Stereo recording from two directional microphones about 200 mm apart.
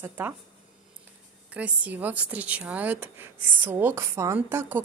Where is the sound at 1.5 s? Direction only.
5° right (ahead or behind).